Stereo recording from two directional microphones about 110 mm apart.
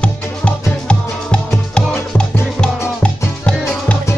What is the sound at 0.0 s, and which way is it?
Music, 10° left (ahead or behind).